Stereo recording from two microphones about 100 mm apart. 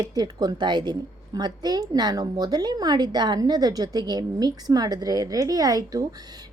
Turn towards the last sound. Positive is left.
turn(degrees=-40)  # may be behind; listen again after turning